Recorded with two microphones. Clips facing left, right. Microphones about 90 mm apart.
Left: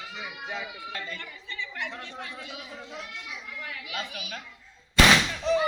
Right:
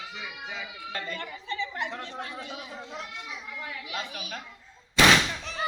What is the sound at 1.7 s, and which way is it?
A child's voice, 35° right (ahead or behind).